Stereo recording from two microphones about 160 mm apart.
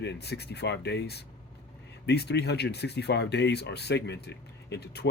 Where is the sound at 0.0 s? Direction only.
90° left.